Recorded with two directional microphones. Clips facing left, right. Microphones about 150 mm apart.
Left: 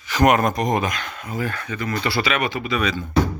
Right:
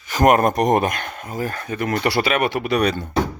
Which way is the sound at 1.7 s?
60° right (ahead or behind).